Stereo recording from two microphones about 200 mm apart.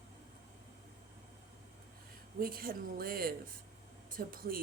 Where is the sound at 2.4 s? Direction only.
50° right (ahead or behind).